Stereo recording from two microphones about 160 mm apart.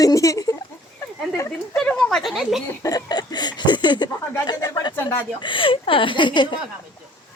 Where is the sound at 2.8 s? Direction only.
25° left (ahead or behind).